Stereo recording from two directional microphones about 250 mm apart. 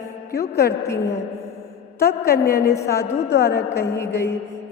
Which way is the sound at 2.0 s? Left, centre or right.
Left.